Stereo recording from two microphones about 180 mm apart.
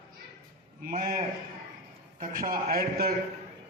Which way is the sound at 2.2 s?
50° right (ahead or behind).